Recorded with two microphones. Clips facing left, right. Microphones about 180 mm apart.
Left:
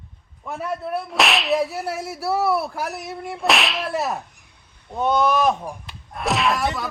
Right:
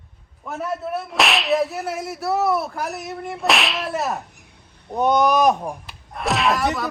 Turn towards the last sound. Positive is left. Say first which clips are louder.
# right 1 dB
turn(degrees=0)  # may be behind; listen again after turning